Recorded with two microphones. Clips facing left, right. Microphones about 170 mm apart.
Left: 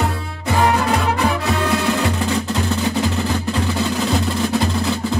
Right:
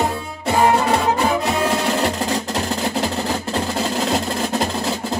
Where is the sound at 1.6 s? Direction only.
35° right (ahead or behind).